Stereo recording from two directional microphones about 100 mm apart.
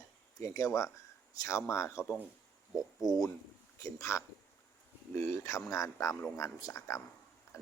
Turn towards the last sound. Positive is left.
turn(degrees=30)  # may be behind; listen again after turning